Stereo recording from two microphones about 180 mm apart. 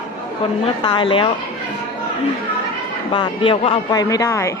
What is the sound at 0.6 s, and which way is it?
Speech, 30° left (ahead or behind).